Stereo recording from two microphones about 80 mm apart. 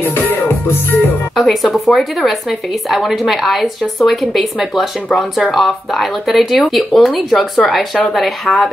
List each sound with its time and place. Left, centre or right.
0.0 s music: left
1.3 s speech: centre